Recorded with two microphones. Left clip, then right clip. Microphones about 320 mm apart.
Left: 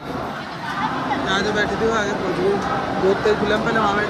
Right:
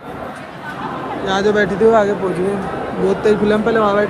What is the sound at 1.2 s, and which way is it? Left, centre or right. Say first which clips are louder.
Speech: right 7 dB; centre.